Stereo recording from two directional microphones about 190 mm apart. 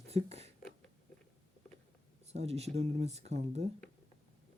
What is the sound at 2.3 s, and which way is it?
Speech, 35° right (ahead or behind).